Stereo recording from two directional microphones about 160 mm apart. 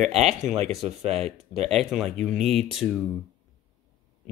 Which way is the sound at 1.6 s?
Centre (ahead or behind).